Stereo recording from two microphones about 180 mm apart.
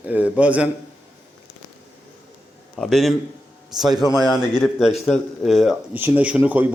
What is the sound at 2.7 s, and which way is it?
A man's voice, centre (ahead or behind).